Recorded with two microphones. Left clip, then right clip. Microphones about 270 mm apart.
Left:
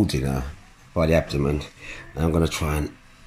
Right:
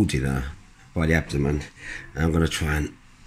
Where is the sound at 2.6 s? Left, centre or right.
Right.